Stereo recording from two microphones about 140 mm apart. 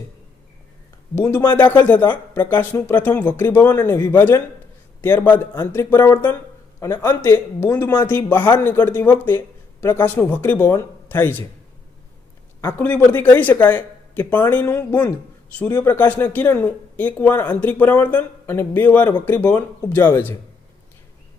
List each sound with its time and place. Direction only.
1.1 s speech: 20° left (ahead or behind)
1.7 s speech: 10° left (ahead or behind)
12.6 s speech: 15° left (ahead or behind)